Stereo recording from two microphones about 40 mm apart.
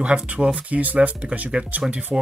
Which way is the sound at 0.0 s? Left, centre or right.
Right.